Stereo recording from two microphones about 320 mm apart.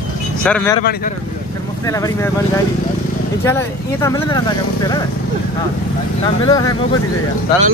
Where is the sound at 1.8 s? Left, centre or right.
Centre.